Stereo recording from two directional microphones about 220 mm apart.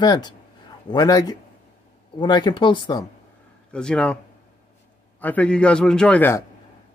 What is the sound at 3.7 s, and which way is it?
Speech, 5° left (ahead or behind).